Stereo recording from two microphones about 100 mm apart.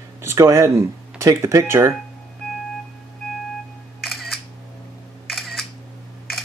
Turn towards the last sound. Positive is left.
turn(degrees=0)  # may be behind; listen again after turning